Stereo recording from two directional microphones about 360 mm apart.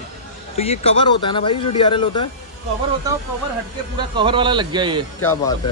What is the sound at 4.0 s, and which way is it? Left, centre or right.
A man's voice, centre.